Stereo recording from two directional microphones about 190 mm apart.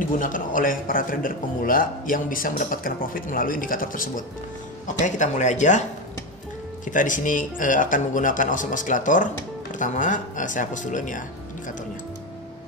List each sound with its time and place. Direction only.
0.2 s speech: 45° left (ahead or behind)